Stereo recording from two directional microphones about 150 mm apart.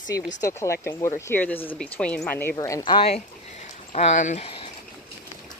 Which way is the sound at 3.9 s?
50° left (ahead or behind).